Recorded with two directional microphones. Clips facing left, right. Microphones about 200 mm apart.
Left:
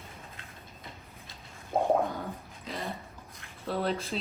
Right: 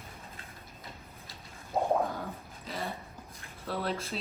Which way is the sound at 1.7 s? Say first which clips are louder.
Left 2 dB; 50° left (ahead or behind).